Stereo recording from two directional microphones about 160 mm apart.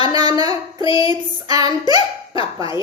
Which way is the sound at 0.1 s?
25° right (ahead or behind).